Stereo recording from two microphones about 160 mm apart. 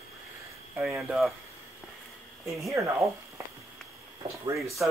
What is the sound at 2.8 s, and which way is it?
Speech, 20° right (ahead or behind).